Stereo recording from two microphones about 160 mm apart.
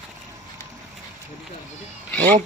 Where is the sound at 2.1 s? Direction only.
10° left (ahead or behind).